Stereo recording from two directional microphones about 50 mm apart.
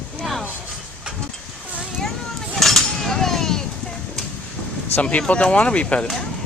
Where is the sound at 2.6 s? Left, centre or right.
Centre.